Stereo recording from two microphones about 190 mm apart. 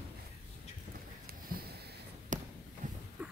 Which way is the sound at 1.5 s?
55° right (ahead or behind).